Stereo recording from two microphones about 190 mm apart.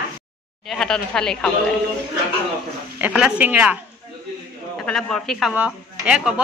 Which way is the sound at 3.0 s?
5° right (ahead or behind).